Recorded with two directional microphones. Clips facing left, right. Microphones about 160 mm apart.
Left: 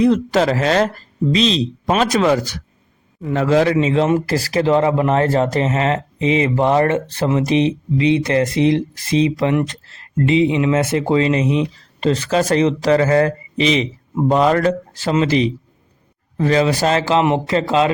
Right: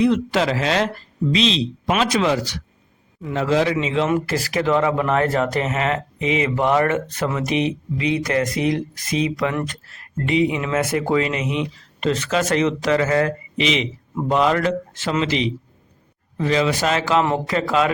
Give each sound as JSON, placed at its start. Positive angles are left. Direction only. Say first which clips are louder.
{"t": 0.0, "sound": "speech", "louder": "left 3 dB", "side_deg": 40}